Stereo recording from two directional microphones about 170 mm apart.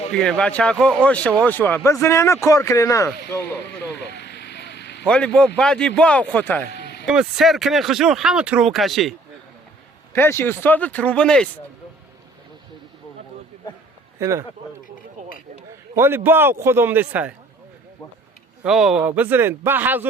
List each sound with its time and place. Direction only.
0.1 s speech: 5° left (ahead or behind)
3.9 s vehicle: 90° left
5.0 s speech: 5° left (ahead or behind)
6.7 s a sound: 80° left
7.0 s speech: 5° right (ahead or behind)
10.1 s speech: 15° left (ahead or behind)
14.2 s speech: 15° right (ahead or behind)
16.0 s speech: 15° right (ahead or behind)
18.6 s speech: 5° right (ahead or behind)